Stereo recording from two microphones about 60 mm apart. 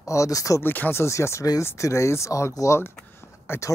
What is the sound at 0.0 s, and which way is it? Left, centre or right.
Speech, left.